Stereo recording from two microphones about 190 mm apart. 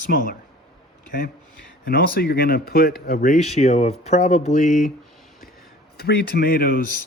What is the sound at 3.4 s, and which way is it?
Speech, 35° left (ahead or behind).